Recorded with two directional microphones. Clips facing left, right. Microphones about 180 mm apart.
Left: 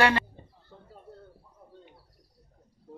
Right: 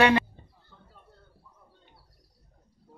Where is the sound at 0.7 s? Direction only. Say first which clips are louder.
Left 7 dB; 40° left (ahead or behind).